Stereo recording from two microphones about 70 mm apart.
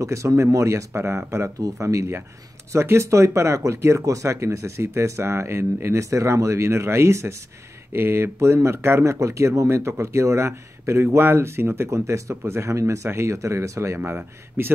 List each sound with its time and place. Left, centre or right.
0.0 s speech: right